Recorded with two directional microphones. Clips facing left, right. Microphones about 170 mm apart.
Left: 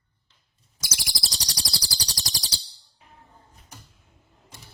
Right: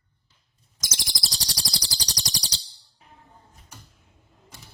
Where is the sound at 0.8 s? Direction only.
10° left (ahead or behind).